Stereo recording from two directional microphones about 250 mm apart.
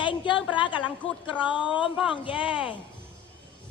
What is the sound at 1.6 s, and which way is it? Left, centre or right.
Speech, centre.